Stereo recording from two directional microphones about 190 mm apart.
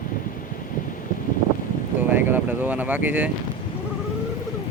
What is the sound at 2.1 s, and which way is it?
Speech, 10° right (ahead or behind).